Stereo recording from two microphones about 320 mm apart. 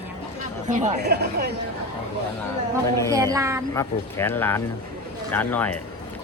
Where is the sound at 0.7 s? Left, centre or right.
Right.